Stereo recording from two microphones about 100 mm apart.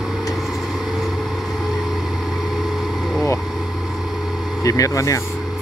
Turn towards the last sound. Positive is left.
turn(degrees=30)  # may be behind; listen again after turning